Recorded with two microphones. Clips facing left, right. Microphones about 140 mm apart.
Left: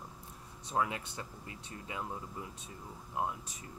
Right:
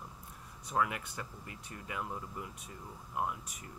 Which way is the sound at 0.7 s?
25° left (ahead or behind).